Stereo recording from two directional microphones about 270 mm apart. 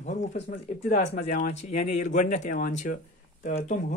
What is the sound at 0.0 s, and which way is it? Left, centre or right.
Speech, left.